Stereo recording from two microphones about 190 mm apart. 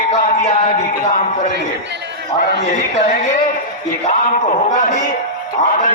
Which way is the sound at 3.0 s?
40° left (ahead or behind).